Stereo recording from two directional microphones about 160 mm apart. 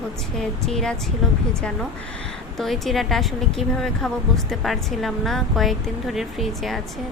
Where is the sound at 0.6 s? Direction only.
5° left (ahead or behind).